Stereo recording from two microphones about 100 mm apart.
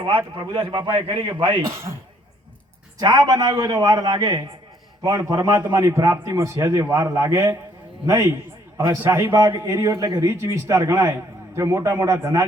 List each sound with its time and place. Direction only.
0.3 s a man's voice: 60° right (ahead or behind)
3.0 s a man's voice: 40° right (ahead or behind); by 9.3 s 20° right (ahead or behind)
9.5 s a man's voice: 30° right (ahead or behind)
10.4 s a man's voice: 25° right (ahead or behind)